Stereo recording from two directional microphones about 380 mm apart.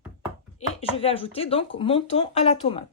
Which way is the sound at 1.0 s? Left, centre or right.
Centre.